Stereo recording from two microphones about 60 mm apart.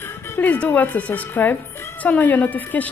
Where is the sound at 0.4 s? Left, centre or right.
Left.